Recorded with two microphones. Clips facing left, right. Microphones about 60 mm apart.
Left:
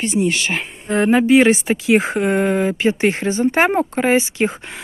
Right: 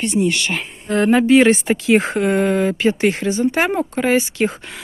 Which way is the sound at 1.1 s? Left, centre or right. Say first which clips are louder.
Even; centre.